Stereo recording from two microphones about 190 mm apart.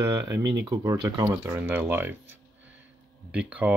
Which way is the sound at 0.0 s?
15° right (ahead or behind).